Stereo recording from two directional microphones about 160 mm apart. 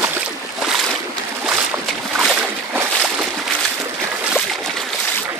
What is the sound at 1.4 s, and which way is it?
Boat, 5° right (ahead or behind).